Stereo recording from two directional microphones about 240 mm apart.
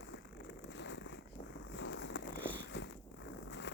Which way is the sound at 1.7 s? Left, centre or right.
Left.